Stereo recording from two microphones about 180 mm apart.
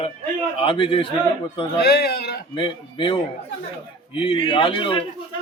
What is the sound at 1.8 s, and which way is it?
Speech, 60° left (ahead or behind).